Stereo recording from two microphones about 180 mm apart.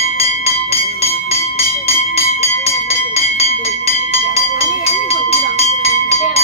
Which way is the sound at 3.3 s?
35° left (ahead or behind).